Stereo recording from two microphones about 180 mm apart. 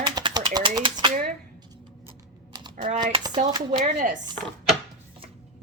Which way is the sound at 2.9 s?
25° right (ahead or behind).